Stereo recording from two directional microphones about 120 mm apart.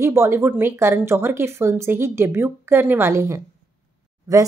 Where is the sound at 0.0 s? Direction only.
20° right (ahead or behind).